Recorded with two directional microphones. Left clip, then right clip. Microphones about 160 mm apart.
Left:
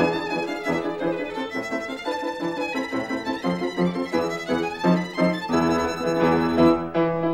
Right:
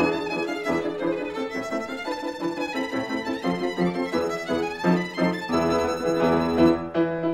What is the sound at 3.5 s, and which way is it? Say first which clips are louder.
Music: even; centre (ahead or behind).